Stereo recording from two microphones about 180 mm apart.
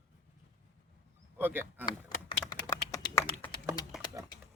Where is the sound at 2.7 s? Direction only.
15° left (ahead or behind).